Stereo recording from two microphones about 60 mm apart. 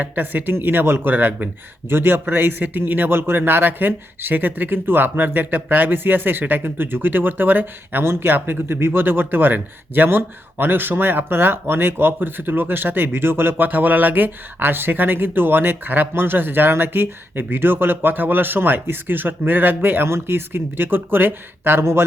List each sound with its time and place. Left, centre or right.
0.0 s speech: right